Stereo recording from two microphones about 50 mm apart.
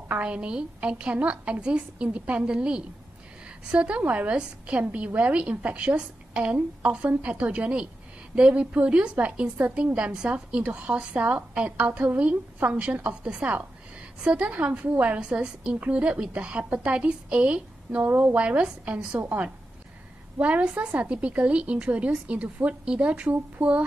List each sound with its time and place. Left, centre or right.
0.2 s a woman's voice: right
9.9 s a woman's voice: right
18.0 s a woman's voice: right